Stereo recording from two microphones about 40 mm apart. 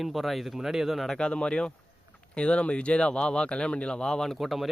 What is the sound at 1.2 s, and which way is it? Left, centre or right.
Speech, left.